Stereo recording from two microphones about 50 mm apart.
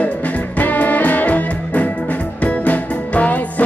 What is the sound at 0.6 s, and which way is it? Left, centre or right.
Music, left.